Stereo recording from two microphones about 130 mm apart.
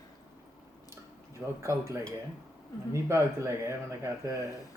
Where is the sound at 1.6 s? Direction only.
20° right (ahead or behind).